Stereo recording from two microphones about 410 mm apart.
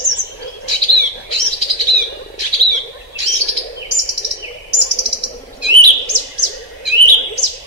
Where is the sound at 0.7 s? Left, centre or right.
Right.